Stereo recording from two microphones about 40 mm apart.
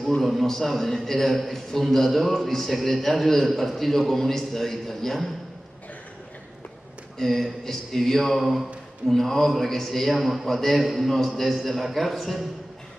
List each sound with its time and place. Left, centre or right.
0.2 s a man's voice: centre
7.2 s a man's voice: centre